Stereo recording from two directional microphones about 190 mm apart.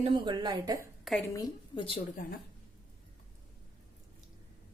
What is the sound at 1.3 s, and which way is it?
Speech, 20° left (ahead or behind).